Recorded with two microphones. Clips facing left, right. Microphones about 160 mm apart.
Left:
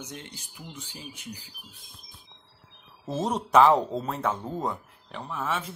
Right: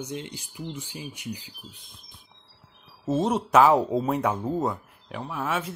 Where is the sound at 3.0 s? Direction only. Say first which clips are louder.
Right 5 dB; centre (ahead or behind).